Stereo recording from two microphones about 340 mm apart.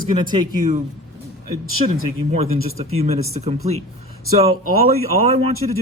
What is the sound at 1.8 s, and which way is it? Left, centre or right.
Speech, right.